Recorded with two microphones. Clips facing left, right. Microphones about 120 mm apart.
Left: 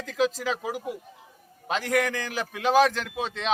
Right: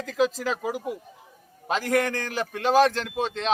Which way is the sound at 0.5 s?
45° right (ahead or behind).